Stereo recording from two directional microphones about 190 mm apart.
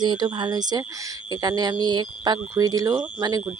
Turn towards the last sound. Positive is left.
turn(degrees=-20)  # may be behind; listen again after turning